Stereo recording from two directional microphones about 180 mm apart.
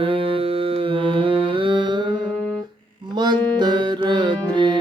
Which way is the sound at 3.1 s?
25° right (ahead or behind).